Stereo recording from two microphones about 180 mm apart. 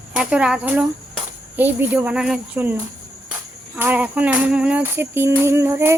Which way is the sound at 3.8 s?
10° right (ahead or behind).